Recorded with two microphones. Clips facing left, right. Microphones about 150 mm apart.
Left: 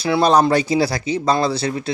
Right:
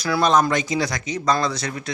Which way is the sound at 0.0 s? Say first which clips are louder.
Left 4 dB; 30° left (ahead or behind).